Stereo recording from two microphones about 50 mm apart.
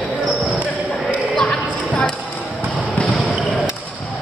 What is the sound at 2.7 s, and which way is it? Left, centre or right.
Basketball bounce, centre.